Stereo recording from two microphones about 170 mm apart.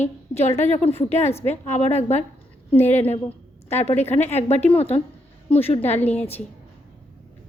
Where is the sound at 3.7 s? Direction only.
40° left (ahead or behind).